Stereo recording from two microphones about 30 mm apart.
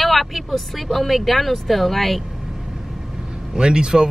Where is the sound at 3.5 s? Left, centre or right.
Right.